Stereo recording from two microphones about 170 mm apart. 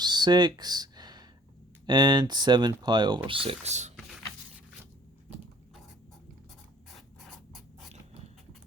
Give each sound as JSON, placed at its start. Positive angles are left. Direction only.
{"t": 0.0, "sound": "a sound", "side_deg": -25}
{"t": 1.9, "sound": "speech", "side_deg": -25}
{"t": 6.9, "sound": "scratch", "side_deg": 0}